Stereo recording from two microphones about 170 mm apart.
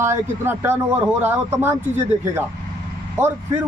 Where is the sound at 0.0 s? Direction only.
15° right (ahead or behind).